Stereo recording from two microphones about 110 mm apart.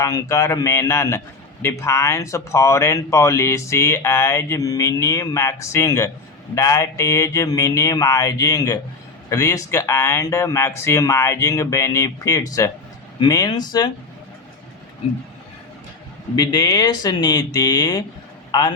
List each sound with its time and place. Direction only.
0.0 s speech: 30° left (ahead or behind)
16.3 s speech: 40° left (ahead or behind)